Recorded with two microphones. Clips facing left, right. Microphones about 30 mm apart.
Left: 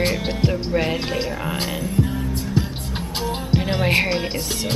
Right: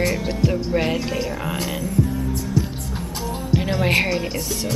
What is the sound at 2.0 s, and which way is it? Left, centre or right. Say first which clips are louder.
Music: right 1 dB; left.